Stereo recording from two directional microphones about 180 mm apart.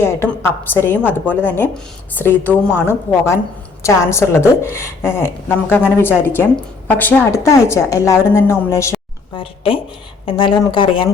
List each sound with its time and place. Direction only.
0.0 s a woman's voice: 15° left (ahead or behind)
9.3 s speech: 30° left (ahead or behind)